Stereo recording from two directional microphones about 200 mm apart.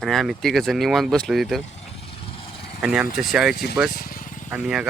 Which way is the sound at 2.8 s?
5° right (ahead or behind).